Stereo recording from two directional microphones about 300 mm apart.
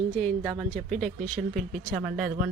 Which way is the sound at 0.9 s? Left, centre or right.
Right.